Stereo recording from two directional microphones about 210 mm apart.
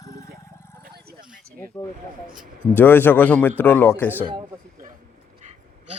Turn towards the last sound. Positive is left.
turn(degrees=-30)  # may be behind; listen again after turning